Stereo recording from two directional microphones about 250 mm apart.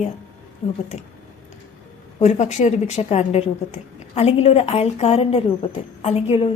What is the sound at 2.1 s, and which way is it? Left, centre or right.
A woman's voice, left.